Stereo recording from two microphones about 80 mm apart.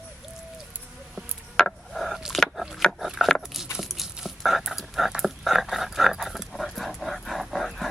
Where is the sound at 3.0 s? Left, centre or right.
Centre.